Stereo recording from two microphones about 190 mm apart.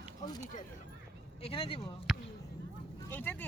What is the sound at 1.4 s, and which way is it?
Speech, 30° left (ahead or behind).